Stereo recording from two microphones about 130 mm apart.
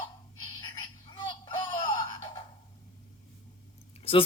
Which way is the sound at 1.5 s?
40° left (ahead or behind).